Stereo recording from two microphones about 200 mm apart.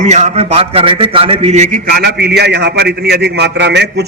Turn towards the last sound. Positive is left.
turn(degrees=-60)  # may be behind; listen again after turning